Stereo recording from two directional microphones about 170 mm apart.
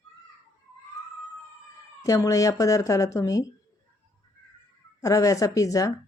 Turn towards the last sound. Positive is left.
turn(degrees=20)  # may be behind; listen again after turning